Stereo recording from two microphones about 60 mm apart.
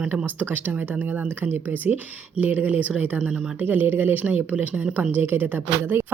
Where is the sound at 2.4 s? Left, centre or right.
Right.